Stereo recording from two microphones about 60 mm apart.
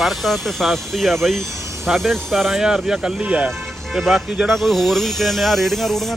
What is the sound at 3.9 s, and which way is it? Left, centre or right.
Speech, centre.